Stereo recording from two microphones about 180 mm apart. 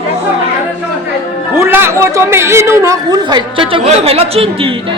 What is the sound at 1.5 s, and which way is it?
A woman's voice, 15° right (ahead or behind).